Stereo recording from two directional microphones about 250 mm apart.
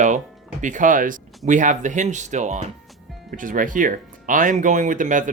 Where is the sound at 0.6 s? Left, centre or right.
Right.